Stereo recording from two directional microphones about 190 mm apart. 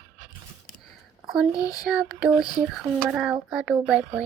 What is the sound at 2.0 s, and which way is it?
Speech, 5° right (ahead or behind).